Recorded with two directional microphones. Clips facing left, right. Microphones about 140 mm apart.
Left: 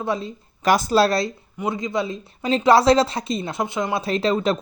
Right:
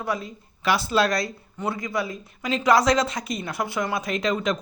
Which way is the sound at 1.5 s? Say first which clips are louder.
Left 3 dB; 20° left (ahead or behind).